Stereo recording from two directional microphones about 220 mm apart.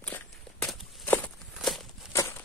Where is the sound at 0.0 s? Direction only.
5° left (ahead or behind).